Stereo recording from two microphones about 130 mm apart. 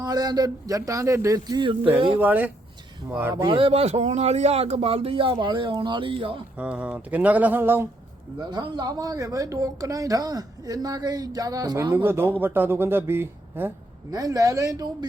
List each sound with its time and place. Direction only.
0.0 s a woman's voice: 30° right (ahead or behind)
2.1 s a woman's voice: 15° right (ahead or behind)
3.4 s speech: 40° right (ahead or behind)
6.6 s speech: 10° right (ahead or behind)
8.4 s a woman's voice: 35° right (ahead or behind)
11.9 s speech: 15° right (ahead or behind)
14.1 s a woman's voice: 25° right (ahead or behind)